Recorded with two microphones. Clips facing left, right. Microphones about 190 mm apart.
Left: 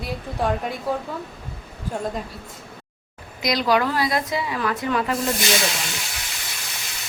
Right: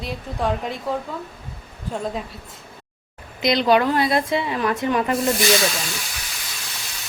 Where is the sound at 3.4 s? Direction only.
25° right (ahead or behind).